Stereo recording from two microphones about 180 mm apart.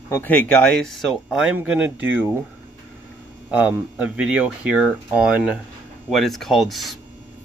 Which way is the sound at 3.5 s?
10° right (ahead or behind).